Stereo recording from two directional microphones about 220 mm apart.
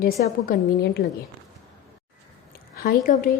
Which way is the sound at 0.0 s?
40° left (ahead or behind).